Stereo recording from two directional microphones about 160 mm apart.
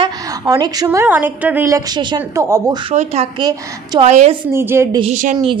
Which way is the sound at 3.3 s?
25° right (ahead or behind).